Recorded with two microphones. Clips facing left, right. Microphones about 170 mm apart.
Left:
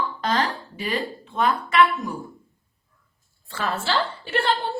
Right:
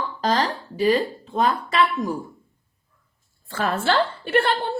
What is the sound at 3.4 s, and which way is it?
A woman's voice, 50° right (ahead or behind).